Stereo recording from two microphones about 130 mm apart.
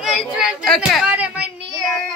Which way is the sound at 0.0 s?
5° right (ahead or behind).